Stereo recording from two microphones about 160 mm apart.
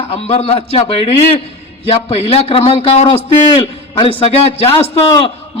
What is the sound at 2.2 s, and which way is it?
A man's voice, 40° left (ahead or behind).